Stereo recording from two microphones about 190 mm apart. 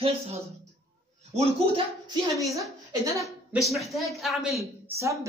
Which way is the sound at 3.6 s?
Centre (ahead or behind).